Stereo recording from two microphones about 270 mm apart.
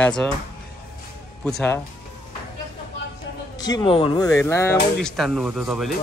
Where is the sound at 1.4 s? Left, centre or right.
Centre.